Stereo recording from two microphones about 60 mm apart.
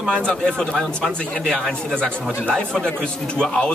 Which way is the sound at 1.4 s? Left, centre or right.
Centre.